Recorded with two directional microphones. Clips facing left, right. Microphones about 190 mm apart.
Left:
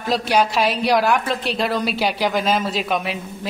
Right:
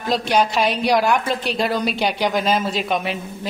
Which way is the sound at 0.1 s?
5° left (ahead or behind).